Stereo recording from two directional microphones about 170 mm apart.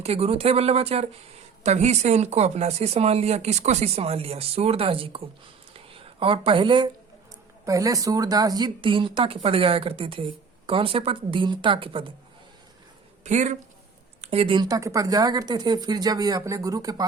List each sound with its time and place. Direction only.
0.0 s speech: 35° right (ahead or behind)
5.7 s a sound: 35° right (ahead or behind)
7.6 s speech: 20° right (ahead or behind)
13.2 s speech: 45° right (ahead or behind); by 17.1 s 20° right (ahead or behind)